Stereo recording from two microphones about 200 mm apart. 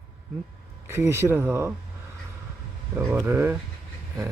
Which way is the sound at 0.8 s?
15° right (ahead or behind).